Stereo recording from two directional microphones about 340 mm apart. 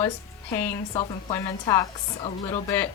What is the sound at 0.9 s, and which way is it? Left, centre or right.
A woman's voice, centre.